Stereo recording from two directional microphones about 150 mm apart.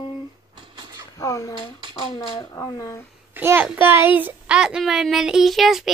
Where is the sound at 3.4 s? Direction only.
15° right (ahead or behind).